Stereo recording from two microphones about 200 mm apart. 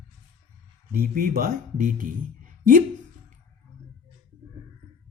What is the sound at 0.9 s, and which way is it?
Speech, 45° right (ahead or behind).